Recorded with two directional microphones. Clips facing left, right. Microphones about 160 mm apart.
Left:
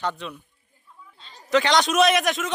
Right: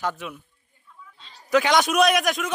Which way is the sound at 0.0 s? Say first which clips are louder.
Even; 5° right (ahead or behind).